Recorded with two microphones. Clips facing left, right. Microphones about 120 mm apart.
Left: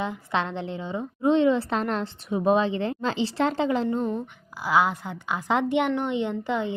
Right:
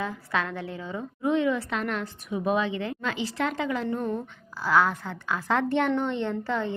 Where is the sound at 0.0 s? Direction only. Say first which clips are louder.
Left 2 dB; 20° left (ahead or behind).